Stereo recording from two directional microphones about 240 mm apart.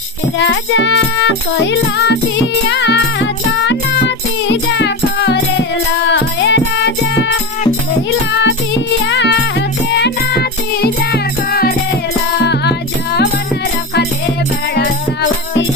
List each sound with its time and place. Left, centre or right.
0.3 s music: left
9.0 s music: left